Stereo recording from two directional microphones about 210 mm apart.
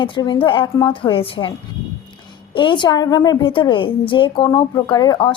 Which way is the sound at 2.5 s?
20° left (ahead or behind).